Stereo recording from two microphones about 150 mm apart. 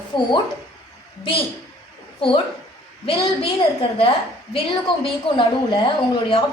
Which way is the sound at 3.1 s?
40° left (ahead or behind).